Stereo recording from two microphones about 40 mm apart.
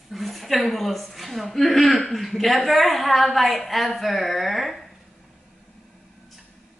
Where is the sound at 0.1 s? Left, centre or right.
Centre.